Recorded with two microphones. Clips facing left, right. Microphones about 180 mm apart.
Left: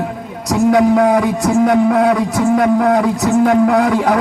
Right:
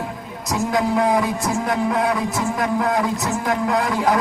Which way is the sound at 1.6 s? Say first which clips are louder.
Left 9 dB; 65° left (ahead or behind).